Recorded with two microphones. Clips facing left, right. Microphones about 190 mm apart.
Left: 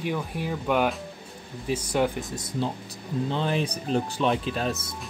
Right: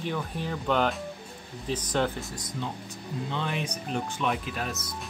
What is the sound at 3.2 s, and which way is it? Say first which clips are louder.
Speech: left 5 dB; 35° left (ahead or behind).